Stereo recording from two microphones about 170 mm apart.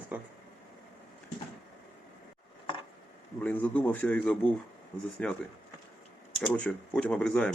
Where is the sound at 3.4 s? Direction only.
10° left (ahead or behind).